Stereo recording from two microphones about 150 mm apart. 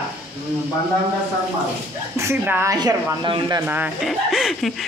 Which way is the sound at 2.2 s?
15° right (ahead or behind).